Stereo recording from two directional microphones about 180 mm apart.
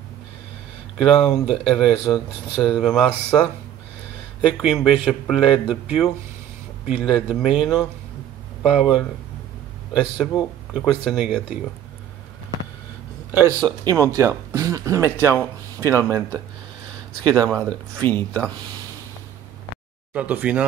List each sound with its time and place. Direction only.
1.0 s speech: centre (ahead or behind)
13.3 s speech: 15° right (ahead or behind)
17.3 s speech: 5° left (ahead or behind)
20.2 s speech: 10° right (ahead or behind)